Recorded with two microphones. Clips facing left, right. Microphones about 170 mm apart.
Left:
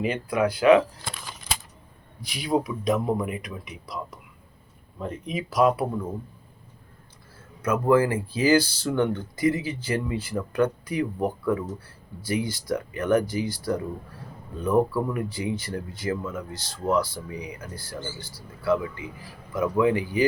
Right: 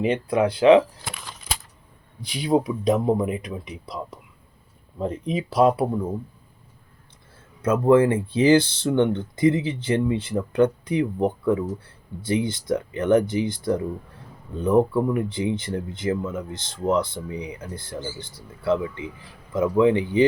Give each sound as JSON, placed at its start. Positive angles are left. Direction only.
{"t": 0.0, "sound": "speech", "side_deg": -30}
{"t": 1.0, "sound": "a sound", "side_deg": 0}
{"t": 2.2, "sound": "speech", "side_deg": -30}
{"t": 7.6, "sound": "speech", "side_deg": -25}